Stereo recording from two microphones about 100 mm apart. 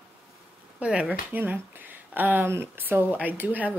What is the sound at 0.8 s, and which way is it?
Speech, 10° right (ahead or behind).